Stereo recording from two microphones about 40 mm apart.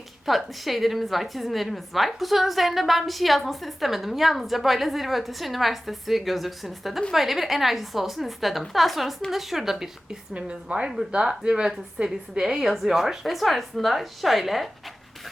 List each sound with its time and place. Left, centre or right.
0.3 s a woman's voice: centre
10.3 s a woman's voice: right; by 13.1 s centre
13.2 s a woman's voice: centre